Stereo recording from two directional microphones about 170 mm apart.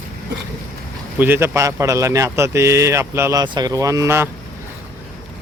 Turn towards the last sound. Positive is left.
turn(degrees=-15)  # may be behind; listen again after turning